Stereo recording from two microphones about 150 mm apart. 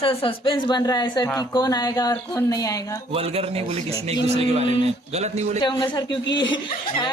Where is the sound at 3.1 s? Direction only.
40° right (ahead or behind).